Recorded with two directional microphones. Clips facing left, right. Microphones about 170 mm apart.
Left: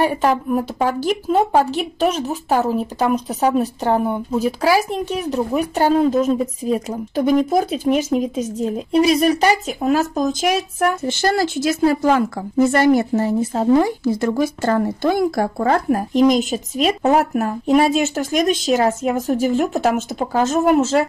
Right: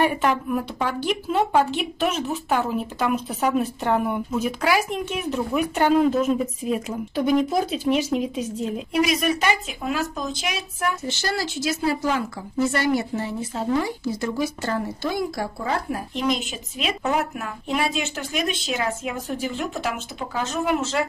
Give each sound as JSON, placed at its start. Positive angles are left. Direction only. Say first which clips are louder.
{"t": 0.0, "sound": "a woman's voice", "louder": "left 4 dB", "side_deg": 35}